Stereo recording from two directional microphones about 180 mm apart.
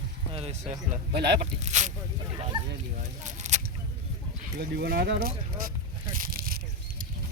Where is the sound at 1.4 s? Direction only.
40° right (ahead or behind).